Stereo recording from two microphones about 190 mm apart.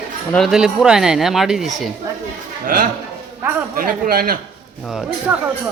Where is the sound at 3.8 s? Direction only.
50° right (ahead or behind).